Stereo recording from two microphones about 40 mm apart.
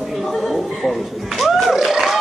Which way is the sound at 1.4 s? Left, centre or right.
Centre.